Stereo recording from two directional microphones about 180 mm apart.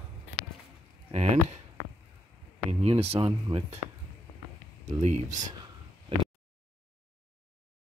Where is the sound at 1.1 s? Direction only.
35° right (ahead or behind).